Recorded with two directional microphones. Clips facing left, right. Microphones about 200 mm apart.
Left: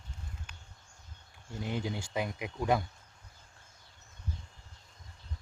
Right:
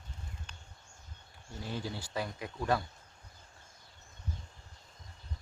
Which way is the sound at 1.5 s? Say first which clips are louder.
Left 4 dB; 20° left (ahead or behind).